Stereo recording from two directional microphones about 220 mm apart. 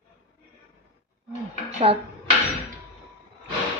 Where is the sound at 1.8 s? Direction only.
25° right (ahead or behind).